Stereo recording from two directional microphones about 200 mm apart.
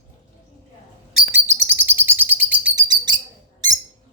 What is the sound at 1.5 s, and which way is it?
Bird, 10° right (ahead or behind).